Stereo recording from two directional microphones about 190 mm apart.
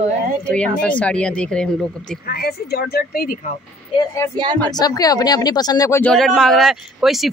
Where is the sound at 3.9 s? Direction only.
15° left (ahead or behind).